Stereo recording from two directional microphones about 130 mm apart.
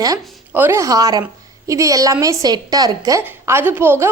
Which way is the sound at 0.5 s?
15° right (ahead or behind).